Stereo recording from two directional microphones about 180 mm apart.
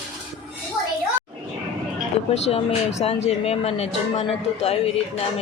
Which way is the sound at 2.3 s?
35° left (ahead or behind).